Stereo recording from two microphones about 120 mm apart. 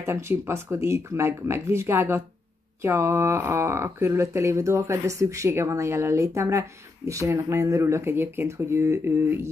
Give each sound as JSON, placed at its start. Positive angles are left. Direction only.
{"t": 0.0, "sound": "speech", "side_deg": -20}